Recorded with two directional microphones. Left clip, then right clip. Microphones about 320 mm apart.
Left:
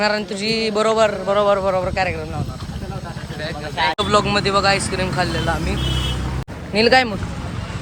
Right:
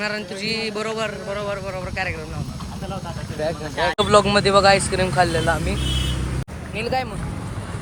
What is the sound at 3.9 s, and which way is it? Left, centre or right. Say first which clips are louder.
Speech: right 5 dB; centre.